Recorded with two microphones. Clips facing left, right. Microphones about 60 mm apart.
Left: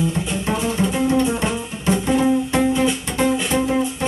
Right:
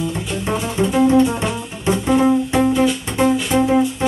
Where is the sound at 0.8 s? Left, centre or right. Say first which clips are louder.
Right 7 dB; centre.